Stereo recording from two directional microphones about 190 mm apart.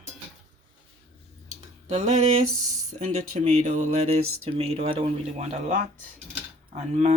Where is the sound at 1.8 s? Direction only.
40° right (ahead or behind).